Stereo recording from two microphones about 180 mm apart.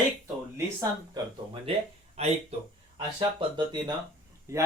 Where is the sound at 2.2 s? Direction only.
35° right (ahead or behind).